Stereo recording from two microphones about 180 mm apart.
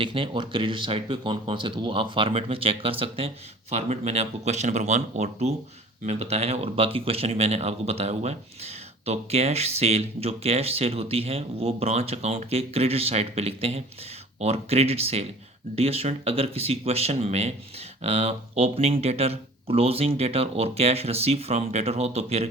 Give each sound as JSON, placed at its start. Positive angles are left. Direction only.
{"t": 0.0, "sound": "speech", "side_deg": -30}